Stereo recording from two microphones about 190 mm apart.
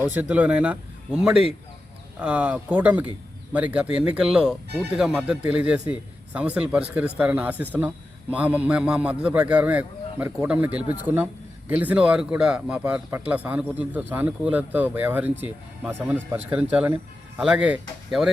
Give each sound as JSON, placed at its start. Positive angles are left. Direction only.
{"t": 0.0, "sound": "a man's voice", "side_deg": -10}